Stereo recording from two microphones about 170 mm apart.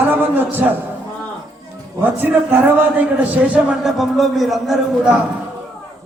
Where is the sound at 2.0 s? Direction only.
10° right (ahead or behind).